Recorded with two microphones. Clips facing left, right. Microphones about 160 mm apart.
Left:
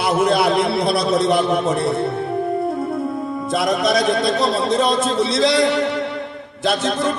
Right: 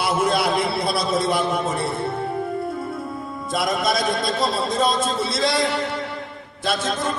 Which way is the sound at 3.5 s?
60° left (ahead or behind).